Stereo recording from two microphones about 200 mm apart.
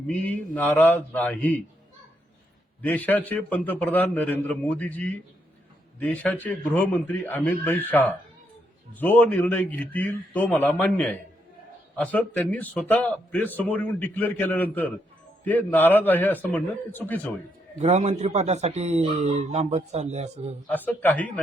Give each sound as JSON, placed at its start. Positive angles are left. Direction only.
{"t": 0.1, "sound": "a man's voice", "side_deg": 5}
{"t": 2.8, "sound": "a man's voice", "side_deg": 10}
{"t": 17.7, "sound": "speech", "side_deg": -35}
{"t": 20.7, "sound": "a man's voice", "side_deg": 10}